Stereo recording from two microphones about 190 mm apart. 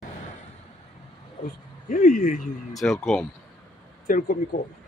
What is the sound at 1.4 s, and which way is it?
Speech, 45° left (ahead or behind).